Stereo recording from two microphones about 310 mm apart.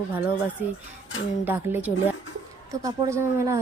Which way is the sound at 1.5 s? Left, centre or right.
Centre.